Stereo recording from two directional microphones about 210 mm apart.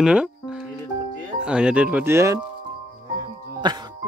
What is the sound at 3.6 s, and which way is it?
Speech, 20° right (ahead or behind).